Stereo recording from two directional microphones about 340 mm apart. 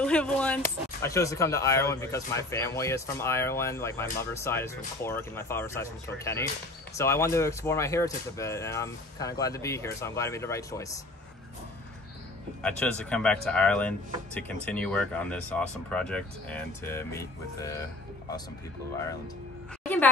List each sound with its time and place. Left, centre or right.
0.0 s speech: centre
12.6 s speech: centre